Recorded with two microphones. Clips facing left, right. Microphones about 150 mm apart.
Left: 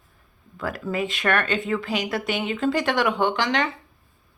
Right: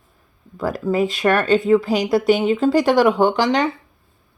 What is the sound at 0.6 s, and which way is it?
Speech, 35° right (ahead or behind).